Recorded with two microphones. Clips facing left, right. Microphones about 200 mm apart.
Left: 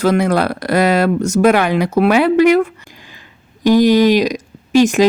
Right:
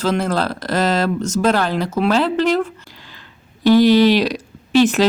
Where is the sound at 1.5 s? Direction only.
70° left (ahead or behind).